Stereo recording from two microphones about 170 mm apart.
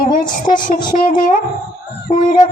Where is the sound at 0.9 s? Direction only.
50° left (ahead or behind).